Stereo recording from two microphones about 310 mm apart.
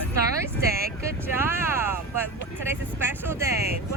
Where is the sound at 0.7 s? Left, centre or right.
Right.